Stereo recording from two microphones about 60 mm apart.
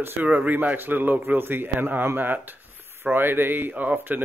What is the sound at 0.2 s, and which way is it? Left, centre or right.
Speech, right.